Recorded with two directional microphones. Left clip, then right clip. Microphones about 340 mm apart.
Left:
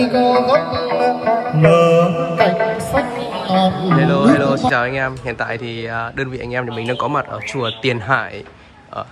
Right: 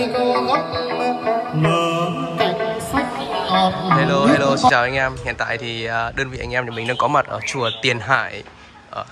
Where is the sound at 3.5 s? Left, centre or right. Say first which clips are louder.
Left 1 dB; centre.